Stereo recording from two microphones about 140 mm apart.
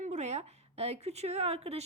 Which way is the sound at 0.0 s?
55° right (ahead or behind).